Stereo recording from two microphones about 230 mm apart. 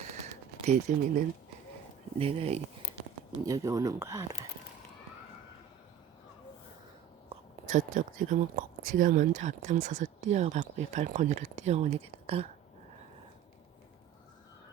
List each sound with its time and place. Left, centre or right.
0.6 s speech: right
2.1 s speech: right
3.4 s speech: centre
7.3 s speech: right